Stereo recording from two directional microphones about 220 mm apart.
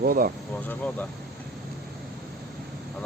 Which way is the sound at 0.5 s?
5° left (ahead or behind).